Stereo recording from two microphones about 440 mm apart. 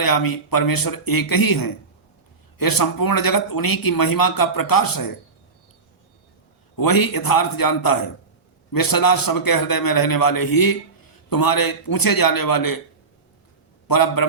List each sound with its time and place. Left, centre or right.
0.0 s a man's voice: left
6.7 s a man's voice: left
13.8 s a man's voice: left